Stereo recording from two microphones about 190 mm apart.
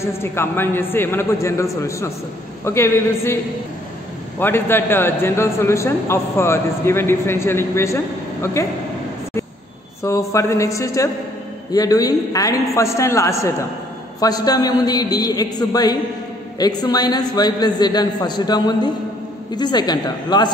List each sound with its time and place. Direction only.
0.0 s a man's voice: 15° left (ahead or behind)
4.4 s a man's voice: 10° left (ahead or behind)
10.0 s a man's voice: 15° left (ahead or behind)